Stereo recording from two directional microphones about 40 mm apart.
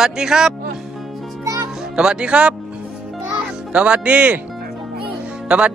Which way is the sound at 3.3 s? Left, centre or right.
Right.